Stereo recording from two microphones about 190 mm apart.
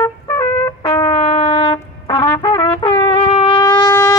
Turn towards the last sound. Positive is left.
turn(degrees=20)  # may be behind; listen again after turning